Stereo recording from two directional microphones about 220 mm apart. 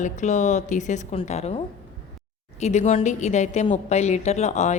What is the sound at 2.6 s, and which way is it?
A woman's voice, 30° left (ahead or behind).